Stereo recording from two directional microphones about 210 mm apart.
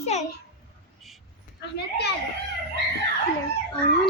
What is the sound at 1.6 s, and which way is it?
Speech, 50° left (ahead or behind).